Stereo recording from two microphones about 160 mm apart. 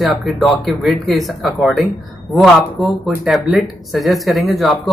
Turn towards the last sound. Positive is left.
turn(degrees=0)  # may be behind; listen again after turning